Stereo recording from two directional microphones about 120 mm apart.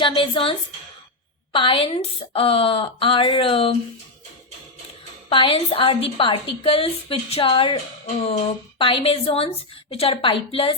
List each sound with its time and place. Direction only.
0.0 s a woman's voice: 45° left (ahead or behind)
1.5 s a woman's voice: 50° left (ahead or behind)
5.3 s a woman's voice: 45° left (ahead or behind)
8.8 s a woman's voice: 50° left (ahead or behind)